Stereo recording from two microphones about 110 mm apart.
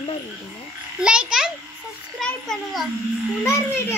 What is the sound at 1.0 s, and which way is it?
Speech, 10° right (ahead or behind).